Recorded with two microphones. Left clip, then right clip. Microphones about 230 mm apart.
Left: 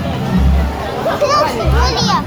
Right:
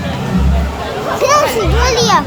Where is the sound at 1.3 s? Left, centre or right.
Right.